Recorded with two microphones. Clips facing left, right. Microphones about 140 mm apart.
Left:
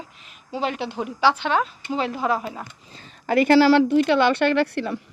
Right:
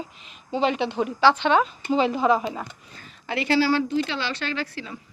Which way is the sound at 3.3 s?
50° left (ahead or behind).